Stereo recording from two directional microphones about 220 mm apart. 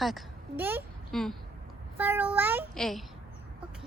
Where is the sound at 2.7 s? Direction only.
Centre (ahead or behind).